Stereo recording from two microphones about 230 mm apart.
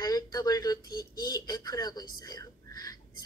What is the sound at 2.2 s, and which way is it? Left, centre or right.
Whispering, centre.